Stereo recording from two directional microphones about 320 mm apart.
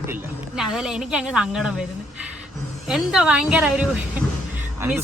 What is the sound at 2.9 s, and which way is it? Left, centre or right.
Speech, centre.